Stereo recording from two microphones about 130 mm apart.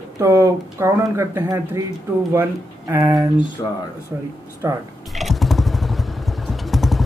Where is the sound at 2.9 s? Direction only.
25° right (ahead or behind).